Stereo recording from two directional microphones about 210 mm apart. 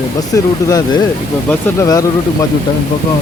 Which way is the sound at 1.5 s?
15° left (ahead or behind).